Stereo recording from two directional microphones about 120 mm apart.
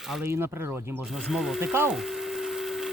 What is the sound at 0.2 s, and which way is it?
Speech, 20° right (ahead or behind).